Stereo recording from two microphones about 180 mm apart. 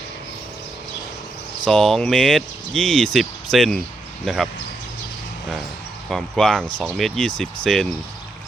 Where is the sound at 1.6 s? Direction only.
Centre (ahead or behind).